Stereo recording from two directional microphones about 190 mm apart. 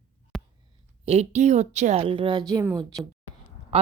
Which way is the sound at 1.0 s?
35° right (ahead or behind).